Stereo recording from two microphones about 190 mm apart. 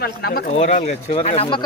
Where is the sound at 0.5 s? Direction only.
40° left (ahead or behind).